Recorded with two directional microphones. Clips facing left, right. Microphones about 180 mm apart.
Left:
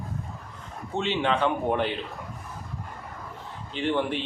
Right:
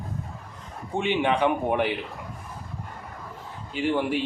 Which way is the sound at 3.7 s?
10° right (ahead or behind).